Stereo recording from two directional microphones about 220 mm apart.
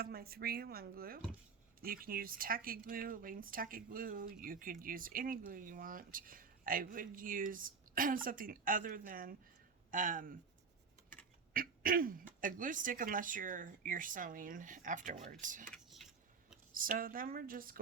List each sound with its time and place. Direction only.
0.0 s speech: 45° right (ahead or behind)
11.5 s speech: 40° right (ahead or behind)
15.7 s a sound: centre (ahead or behind)
16.7 s speech: 40° right (ahead or behind)